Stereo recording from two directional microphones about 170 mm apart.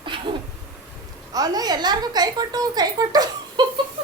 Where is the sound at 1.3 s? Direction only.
25° right (ahead or behind).